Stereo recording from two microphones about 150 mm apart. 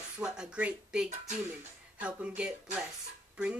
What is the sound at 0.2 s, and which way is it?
Speech, 5° right (ahead or behind).